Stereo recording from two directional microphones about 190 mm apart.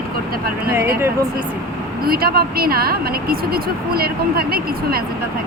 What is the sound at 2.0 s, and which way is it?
Speech, 50° right (ahead or behind).